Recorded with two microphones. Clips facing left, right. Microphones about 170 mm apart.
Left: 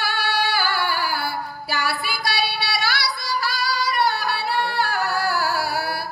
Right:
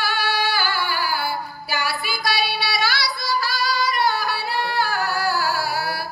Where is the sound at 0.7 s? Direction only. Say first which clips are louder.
Left 1 dB; 60° left (ahead or behind).